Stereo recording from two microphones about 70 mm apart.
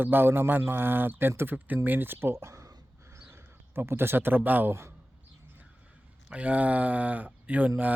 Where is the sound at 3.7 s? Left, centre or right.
Right.